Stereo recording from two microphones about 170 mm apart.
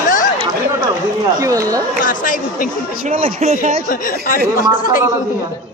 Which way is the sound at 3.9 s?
55° left (ahead or behind).